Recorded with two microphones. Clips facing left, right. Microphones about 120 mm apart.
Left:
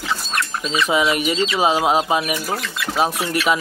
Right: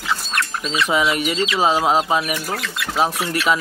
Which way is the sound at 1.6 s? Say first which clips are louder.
Right 1 dB; 15° left (ahead or behind).